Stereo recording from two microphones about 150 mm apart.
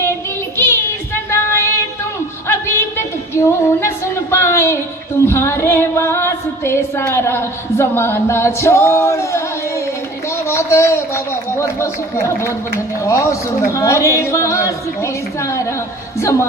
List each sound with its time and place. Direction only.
0.5 s child singing: 15° left (ahead or behind)
2.5 s a sound: 15° left (ahead or behind)
5.3 s female singing: 15° left (ahead or behind)
10.5 s speech: 20° left (ahead or behind)